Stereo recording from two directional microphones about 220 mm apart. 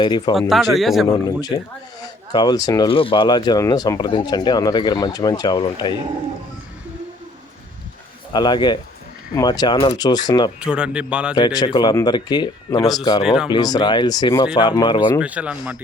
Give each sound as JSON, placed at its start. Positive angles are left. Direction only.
{"t": 0.0, "sound": "speech", "side_deg": 20}
{"t": 0.3, "sound": "a man's voice", "side_deg": 0}
{"t": 1.1, "sound": "speech", "side_deg": 15}
{"t": 8.3, "sound": "speech", "side_deg": 20}
{"t": 10.6, "sound": "a man's voice", "side_deg": -5}
{"t": 11.3, "sound": "speech", "side_deg": 20}
{"t": 13.2, "sound": "a man's voice", "side_deg": -5}
{"t": 13.5, "sound": "speech", "side_deg": 20}
{"t": 15.2, "sound": "a man's voice", "side_deg": -5}